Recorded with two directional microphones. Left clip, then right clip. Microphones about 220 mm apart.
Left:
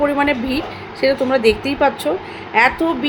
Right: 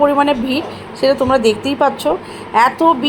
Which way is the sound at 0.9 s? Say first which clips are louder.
Right 3 dB; 20° left (ahead or behind).